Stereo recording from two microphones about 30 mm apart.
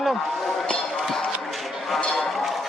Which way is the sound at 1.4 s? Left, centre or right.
Centre.